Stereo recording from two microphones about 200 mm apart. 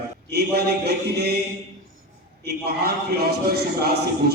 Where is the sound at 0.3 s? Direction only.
55° right (ahead or behind).